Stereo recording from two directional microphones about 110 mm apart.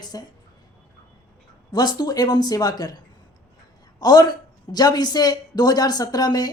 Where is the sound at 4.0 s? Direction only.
35° left (ahead or behind).